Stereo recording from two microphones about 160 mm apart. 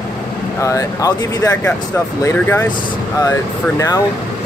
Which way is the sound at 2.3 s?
10° left (ahead or behind).